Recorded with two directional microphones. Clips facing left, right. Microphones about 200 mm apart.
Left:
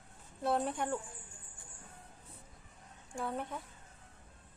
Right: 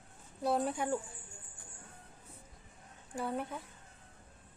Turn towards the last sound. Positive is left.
turn(degrees=0)  # may be behind; listen again after turning